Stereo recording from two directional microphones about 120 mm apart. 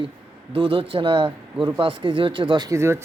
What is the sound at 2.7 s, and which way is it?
Speech, 20° right (ahead or behind).